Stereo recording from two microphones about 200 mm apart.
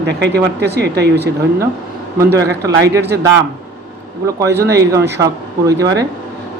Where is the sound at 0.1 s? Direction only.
55° right (ahead or behind).